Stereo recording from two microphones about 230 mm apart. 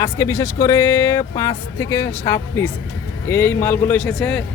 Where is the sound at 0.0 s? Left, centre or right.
Centre.